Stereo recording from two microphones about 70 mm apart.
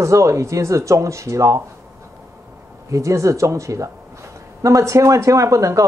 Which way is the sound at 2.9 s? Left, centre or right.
Right.